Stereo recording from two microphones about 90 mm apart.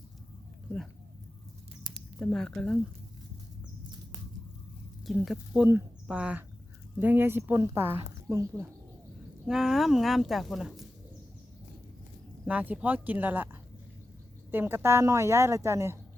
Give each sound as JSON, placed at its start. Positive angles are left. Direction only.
{"t": 2.1, "sound": "a woman's voice", "side_deg": 10}
{"t": 5.0, "sound": "speech", "side_deg": 0}
{"t": 6.1, "sound": "a woman's voice", "side_deg": -15}
{"t": 9.5, "sound": "speech", "side_deg": -5}
{"t": 12.5, "sound": "a woman's voice", "side_deg": -15}